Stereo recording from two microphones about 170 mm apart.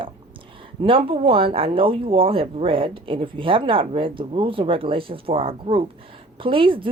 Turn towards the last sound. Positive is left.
turn(degrees=-30)  # may be behind; listen again after turning